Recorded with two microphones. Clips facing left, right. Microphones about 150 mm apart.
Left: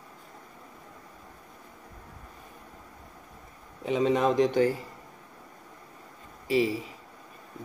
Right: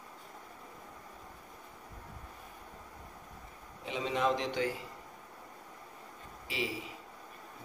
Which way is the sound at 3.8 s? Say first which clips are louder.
Left 8 dB; 45° left (ahead or behind).